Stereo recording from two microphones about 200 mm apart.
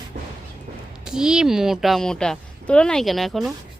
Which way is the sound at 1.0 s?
5° right (ahead or behind).